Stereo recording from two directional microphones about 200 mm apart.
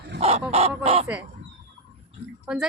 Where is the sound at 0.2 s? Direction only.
30° right (ahead or behind).